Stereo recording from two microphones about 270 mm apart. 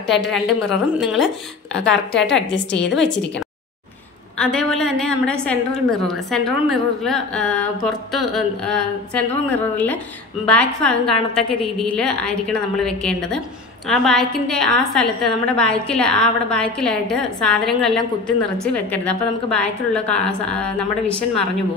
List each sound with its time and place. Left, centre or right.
0.0 s a woman's voice: centre
1.8 s a woman's voice: left
2.2 s a woman's voice: centre
4.4 s a woman's voice: centre